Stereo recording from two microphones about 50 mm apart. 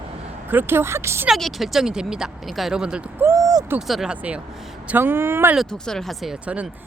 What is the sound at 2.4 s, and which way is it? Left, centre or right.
Speech, centre.